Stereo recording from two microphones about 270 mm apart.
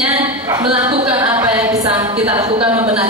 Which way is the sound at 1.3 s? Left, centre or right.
Centre.